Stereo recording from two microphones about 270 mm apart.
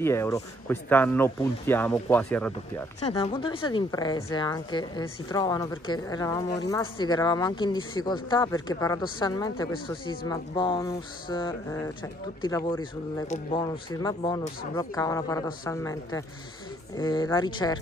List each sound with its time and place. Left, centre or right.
0.0 s a woman's voice: centre
3.1 s a woman's voice: left